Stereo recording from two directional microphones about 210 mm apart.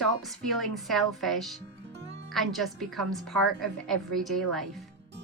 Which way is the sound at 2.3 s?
Centre (ahead or behind).